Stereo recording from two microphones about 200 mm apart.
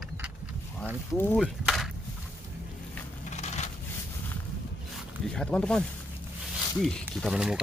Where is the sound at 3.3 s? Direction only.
35° left (ahead or behind).